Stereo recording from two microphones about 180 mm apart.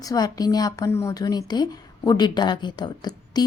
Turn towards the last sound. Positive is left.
turn(degrees=25)  # may be behind; listen again after turning